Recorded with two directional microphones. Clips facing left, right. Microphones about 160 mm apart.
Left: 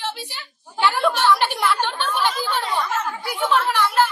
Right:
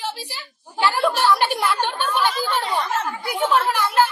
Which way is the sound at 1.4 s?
10° right (ahead or behind).